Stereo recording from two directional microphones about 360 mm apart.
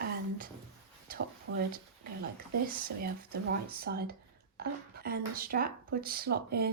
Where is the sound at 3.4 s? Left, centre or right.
Right.